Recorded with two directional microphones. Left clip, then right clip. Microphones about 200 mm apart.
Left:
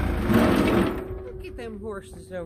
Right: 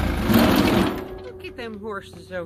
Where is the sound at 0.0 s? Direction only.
35° right (ahead or behind).